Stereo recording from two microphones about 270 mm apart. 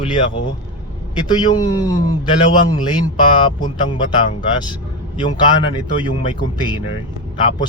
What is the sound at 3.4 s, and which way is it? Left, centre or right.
Speech, centre.